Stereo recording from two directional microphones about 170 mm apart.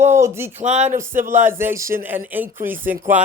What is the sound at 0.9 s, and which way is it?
Speech, 15° right (ahead or behind).